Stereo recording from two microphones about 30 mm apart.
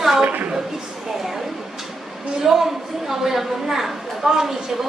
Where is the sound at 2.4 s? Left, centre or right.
Centre.